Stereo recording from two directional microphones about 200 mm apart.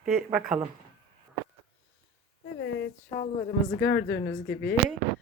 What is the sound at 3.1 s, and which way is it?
Speech, 20° left (ahead or behind).